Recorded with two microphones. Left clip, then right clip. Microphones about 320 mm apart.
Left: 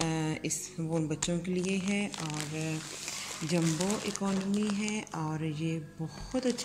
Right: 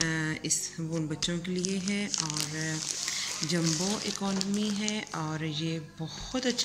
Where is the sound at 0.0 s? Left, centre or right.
Centre.